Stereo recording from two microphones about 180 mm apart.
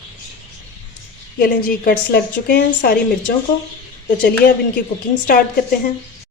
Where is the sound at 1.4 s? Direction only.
50° left (ahead or behind).